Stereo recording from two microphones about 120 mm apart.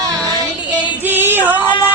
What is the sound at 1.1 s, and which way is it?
Female singing, 15° right (ahead or behind).